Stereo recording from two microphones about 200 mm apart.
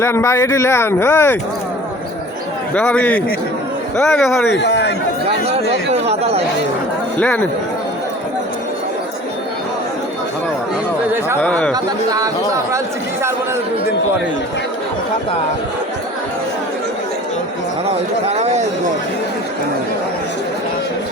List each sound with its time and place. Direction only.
0.0 s speech: 15° left (ahead or behind)
2.7 s speech: 5° left (ahead or behind)
4.5 s a man's voice: 60° left (ahead or behind)
7.2 s speech: 5° left (ahead or behind)
11.3 s speech: 5° left (ahead or behind)
11.7 s speech: 20° right (ahead or behind)
18.3 s speech: 35° right (ahead or behind)